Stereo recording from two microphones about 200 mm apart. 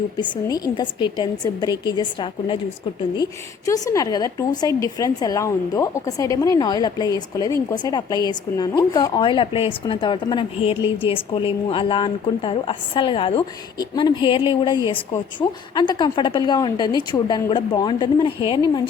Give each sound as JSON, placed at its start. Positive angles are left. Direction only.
{"t": 0.2, "sound": "a woman's voice", "side_deg": 20}
{"t": 3.7, "sound": "a woman's voice", "side_deg": 15}